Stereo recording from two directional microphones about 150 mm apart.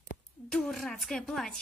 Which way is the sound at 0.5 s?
Centre (ahead or behind).